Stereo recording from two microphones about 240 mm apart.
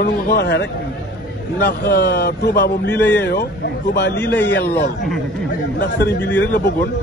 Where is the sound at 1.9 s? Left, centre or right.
Left.